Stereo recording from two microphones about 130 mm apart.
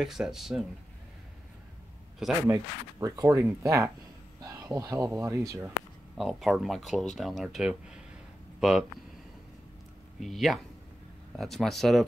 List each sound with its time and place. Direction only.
0.0 s speech: 5° right (ahead or behind)
2.4 s speech: 25° right (ahead or behind)
6.1 s speech: centre (ahead or behind)
10.2 s speech: centre (ahead or behind)